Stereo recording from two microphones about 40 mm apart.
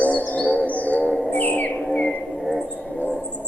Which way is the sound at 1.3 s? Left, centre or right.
Left.